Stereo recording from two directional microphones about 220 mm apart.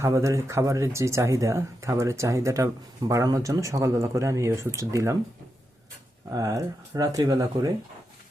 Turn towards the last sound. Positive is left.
turn(degrees=-15)  # may be behind; listen again after turning